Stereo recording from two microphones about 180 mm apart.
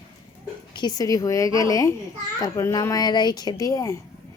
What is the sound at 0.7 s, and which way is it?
Speech, 25° left (ahead or behind).